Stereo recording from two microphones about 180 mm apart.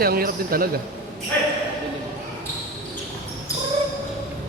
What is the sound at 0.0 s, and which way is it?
Speech, 55° right (ahead or behind).